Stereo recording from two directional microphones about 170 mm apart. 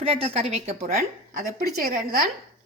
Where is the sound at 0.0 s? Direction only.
35° right (ahead or behind).